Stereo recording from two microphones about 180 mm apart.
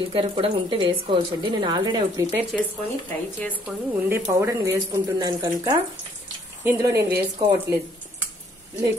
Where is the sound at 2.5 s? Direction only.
Centre (ahead or behind).